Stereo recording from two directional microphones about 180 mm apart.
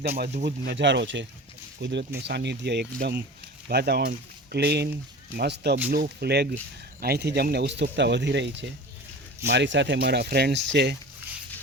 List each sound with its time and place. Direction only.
0.4 s speech: 65° right (ahead or behind); by 1.3 s 85° right
1.8 s speech: 75° right (ahead or behind)